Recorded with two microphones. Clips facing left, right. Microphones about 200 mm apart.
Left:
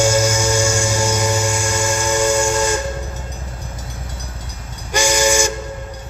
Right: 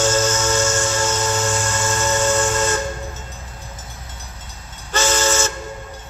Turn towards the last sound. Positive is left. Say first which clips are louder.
# left 3 dB
turn(degrees=15)  # may be behind; listen again after turning